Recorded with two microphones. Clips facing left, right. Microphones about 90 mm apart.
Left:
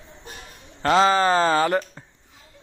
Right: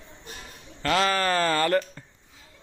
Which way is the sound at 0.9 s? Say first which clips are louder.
Left 6 dB; 25° left (ahead or behind).